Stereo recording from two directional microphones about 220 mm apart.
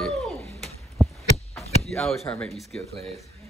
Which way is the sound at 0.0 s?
Centre (ahead or behind).